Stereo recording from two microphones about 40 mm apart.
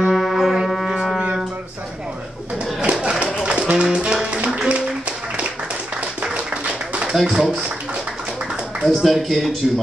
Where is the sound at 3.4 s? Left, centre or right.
Right.